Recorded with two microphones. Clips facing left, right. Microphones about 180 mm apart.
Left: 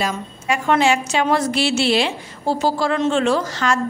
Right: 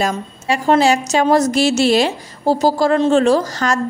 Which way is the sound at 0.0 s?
35° right (ahead or behind).